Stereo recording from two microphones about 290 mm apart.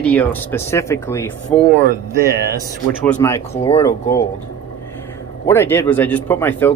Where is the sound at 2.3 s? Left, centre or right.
Right.